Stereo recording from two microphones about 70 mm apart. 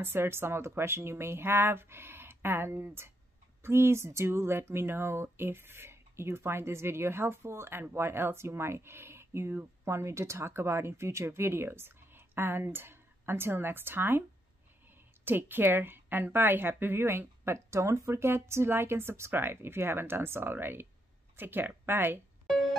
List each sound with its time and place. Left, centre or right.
0.0 s speech: right
15.2 s speech: right